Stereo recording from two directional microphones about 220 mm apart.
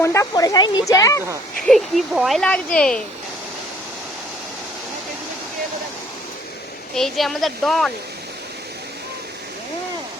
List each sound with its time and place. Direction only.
0.0 s speech: 15° left (ahead or behind)
1.6 s speech: centre (ahead or behind)
6.9 s speech: centre (ahead or behind)